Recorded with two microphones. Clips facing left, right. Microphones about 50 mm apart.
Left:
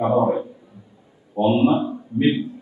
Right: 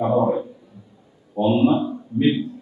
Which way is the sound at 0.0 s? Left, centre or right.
Left.